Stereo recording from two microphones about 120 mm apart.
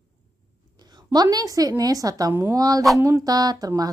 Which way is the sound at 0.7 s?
35° right (ahead or behind).